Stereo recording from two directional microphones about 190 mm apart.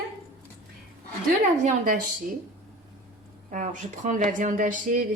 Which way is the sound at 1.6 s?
45° right (ahead or behind).